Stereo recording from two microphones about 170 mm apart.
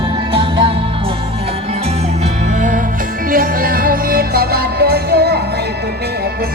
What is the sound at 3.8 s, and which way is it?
Music, 60° right (ahead or behind).